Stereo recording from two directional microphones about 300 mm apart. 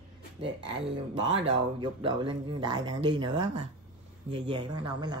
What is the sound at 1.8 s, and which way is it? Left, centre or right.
Speech, centre.